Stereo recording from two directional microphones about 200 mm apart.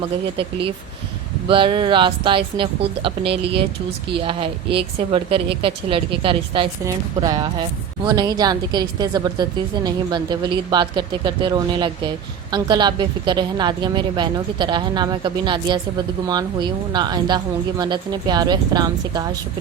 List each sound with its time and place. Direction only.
1.5 s a woman's voice: 25° right (ahead or behind)